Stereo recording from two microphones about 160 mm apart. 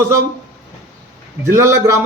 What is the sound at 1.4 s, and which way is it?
Speech, 15° right (ahead or behind).